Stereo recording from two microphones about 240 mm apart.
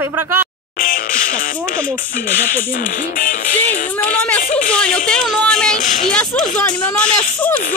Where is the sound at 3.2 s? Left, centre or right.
Left.